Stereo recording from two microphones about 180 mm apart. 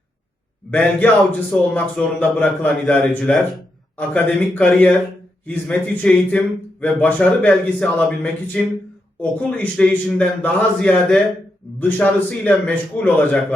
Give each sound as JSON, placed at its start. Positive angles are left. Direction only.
{"t": 0.7, "sound": "a man's voice", "side_deg": 10}